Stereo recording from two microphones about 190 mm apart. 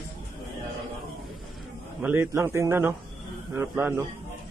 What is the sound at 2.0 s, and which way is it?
A man's voice, 10° right (ahead or behind).